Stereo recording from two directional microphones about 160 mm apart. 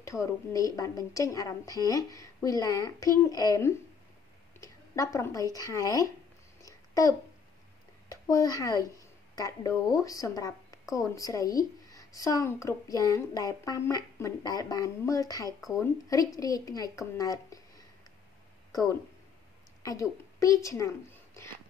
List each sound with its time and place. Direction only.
0.0 s a woman's voice: 20° left (ahead or behind)
6.6 s babbling: 20° left (ahead or behind)
8.1 s a child's voice: 20° left (ahead or behind)
19.8 s a woman's voice: 20° left (ahead or behind)